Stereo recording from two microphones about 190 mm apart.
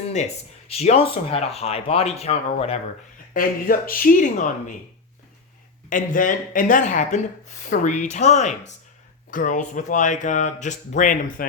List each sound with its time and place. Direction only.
0.7 s speech: 35° left (ahead or behind)
3.3 s speech: 50° left (ahead or behind)
5.9 s speech: 45° left (ahead or behind)